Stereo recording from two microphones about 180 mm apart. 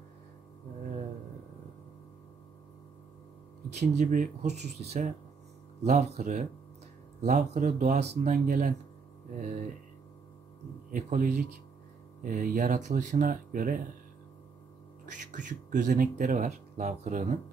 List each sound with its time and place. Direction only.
3.8 s speech: 40° right (ahead or behind)
10.9 s speech: 45° right (ahead or behind)
15.1 s speech: 45° right (ahead or behind)